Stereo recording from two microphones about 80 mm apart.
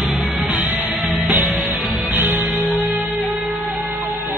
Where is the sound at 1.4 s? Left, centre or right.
Centre.